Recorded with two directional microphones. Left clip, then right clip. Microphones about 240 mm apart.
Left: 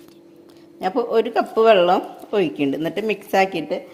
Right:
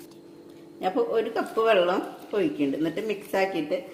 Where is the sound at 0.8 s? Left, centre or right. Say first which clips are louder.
Left 5 dB; left.